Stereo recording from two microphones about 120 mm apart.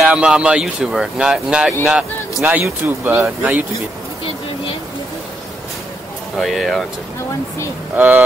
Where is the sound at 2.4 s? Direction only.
20° right (ahead or behind).